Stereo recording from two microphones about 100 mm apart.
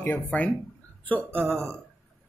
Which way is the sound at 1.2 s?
20° right (ahead or behind).